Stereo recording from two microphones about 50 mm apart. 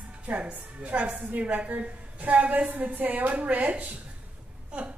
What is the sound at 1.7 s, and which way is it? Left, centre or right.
A woman's voice, right.